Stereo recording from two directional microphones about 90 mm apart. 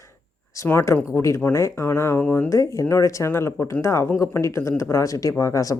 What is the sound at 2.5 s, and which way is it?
Speech, 35° left (ahead or behind).